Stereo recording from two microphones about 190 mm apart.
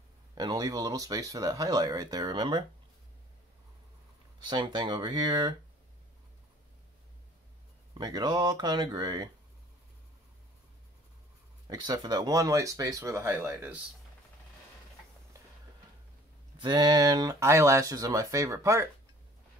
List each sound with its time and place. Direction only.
0.3 s speech: 20° right (ahead or behind)
4.5 s speech: 25° right (ahead or behind)
8.0 s speech: 20° right (ahead or behind)
11.6 s speech: 20° right (ahead or behind)
16.5 s speech: 25° right (ahead or behind)